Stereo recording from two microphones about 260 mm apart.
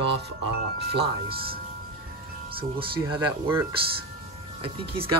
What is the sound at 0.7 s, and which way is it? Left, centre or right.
Speech, right.